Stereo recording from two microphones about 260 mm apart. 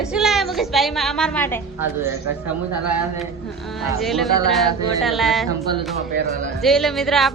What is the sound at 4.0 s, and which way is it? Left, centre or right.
A woman's voice, centre.